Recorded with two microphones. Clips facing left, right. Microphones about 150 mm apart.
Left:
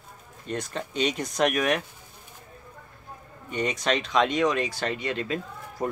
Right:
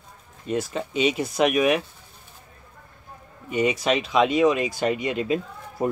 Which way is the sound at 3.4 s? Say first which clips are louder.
Right 5 dB; 10° right (ahead or behind).